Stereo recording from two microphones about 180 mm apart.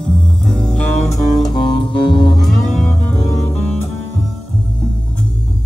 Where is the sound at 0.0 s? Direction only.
5° left (ahead or behind).